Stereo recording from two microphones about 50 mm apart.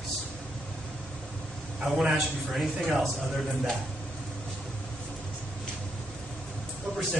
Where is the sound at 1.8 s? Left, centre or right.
Centre.